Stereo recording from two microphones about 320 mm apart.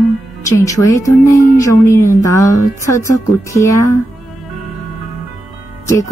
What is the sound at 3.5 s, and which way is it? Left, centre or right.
Speech, centre.